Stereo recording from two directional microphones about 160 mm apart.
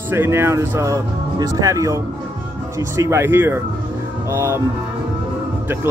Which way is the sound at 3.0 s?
15° right (ahead or behind).